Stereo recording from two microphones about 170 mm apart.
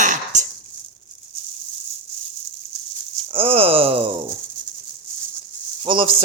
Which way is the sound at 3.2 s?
35° right (ahead or behind).